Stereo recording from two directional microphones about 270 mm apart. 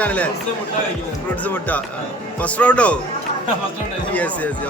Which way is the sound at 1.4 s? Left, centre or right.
Centre.